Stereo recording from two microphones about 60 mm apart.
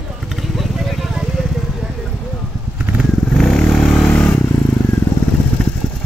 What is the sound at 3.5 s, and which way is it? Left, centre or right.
Vehicle, centre.